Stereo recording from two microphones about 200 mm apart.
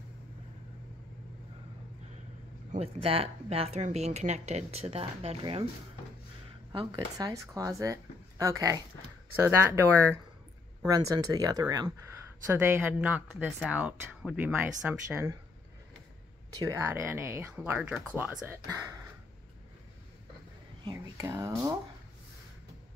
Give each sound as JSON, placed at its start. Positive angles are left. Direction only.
{"t": 2.7, "sound": "speech", "side_deg": -30}
{"t": 7.2, "sound": "speech", "side_deg": -15}
{"t": 10.8, "sound": "speech", "side_deg": -15}
{"t": 16.5, "sound": "speech", "side_deg": -15}
{"t": 20.8, "sound": "speech", "side_deg": -15}